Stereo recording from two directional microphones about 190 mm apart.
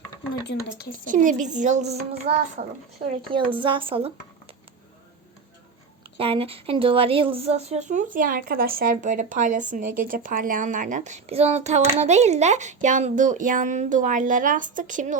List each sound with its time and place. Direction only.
0.5 s speech: 65° left (ahead or behind)
1.0 s a woman's voice: 45° right (ahead or behind)
2.6 s speech: 55° right (ahead or behind)
3.3 s speech: 25° right (ahead or behind)
6.1 s a woman's voice: 30° right (ahead or behind)